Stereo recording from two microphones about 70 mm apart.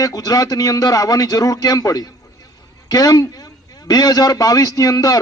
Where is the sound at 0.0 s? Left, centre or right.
Left.